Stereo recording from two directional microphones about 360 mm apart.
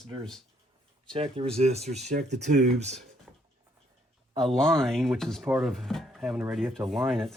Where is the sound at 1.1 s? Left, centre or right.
Centre.